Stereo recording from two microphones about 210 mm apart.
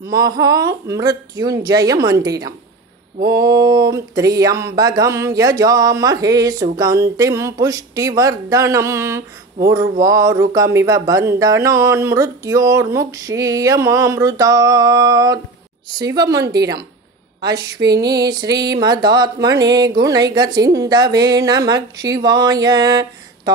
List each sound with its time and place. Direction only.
0.0 s a woman's voice: 15° right (ahead or behind)